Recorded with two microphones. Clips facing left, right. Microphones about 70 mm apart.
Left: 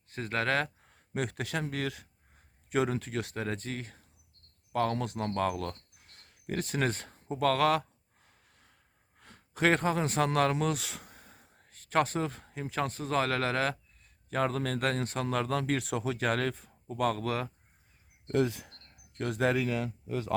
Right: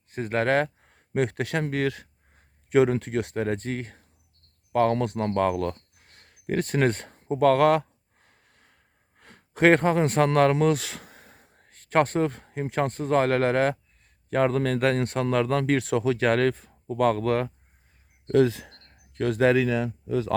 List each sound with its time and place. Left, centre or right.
0.1 s speech: right
0.3 s speech: right
1.5 s speech: right
3.3 s speech: right
8.2 s a sound: right
9.1 s speech: right
10.8 s a sound: right
11.3 s speech: right
17.0 s speech: right
18.3 s speech: right
19.1 s speech: right